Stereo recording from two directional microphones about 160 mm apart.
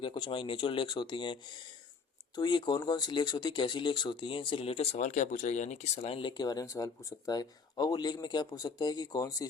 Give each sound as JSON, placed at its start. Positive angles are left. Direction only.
{"t": 0.0, "sound": "speech", "side_deg": 30}